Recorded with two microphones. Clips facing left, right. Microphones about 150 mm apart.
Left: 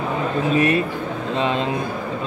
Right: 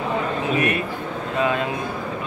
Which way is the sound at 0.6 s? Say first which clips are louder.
Left 6 dB; 30° left (ahead or behind).